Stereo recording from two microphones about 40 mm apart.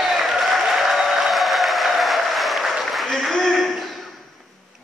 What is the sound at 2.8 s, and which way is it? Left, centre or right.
Applause, centre.